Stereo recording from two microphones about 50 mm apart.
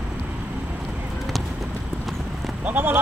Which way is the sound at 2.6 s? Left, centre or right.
Right.